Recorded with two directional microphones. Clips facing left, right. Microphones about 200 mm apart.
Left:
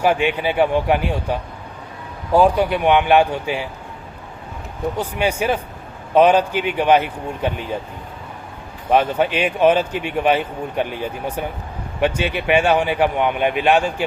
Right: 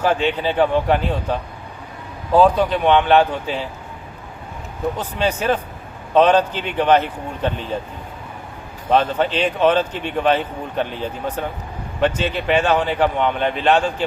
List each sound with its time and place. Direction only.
0.0 s a man's voice: 10° left (ahead or behind)
4.9 s a man's voice: 10° left (ahead or behind)
8.9 s a man's voice: 10° left (ahead or behind)